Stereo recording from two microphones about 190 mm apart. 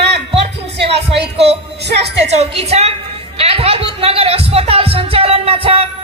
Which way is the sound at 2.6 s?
35° right (ahead or behind).